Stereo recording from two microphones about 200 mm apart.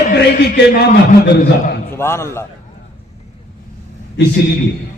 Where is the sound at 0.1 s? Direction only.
60° left (ahead or behind).